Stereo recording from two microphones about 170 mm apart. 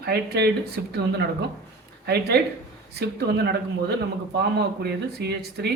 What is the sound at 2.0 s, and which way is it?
Speech, 70° right (ahead or behind).